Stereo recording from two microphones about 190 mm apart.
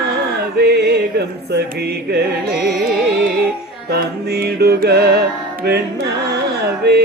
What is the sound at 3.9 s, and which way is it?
Music, 55° right (ahead or behind).